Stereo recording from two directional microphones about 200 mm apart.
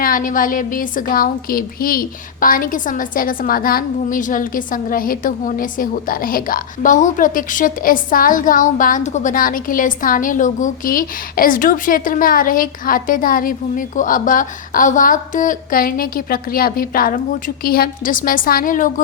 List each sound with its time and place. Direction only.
0.0 s a woman's voice: 45° left (ahead or behind)